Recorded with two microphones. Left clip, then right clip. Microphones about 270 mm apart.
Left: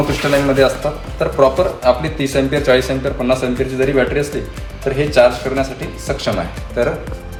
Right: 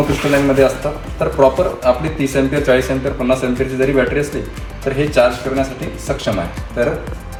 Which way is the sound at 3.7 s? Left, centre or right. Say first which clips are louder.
Even; left.